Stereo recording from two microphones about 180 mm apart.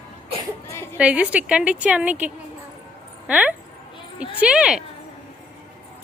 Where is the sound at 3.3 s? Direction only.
10° right (ahead or behind).